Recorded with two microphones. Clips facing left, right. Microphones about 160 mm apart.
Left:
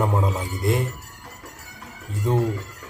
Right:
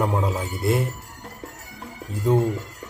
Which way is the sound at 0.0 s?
Centre (ahead or behind).